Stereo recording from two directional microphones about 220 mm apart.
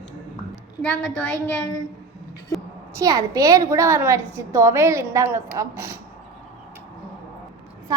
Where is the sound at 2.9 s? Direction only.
15° right (ahead or behind).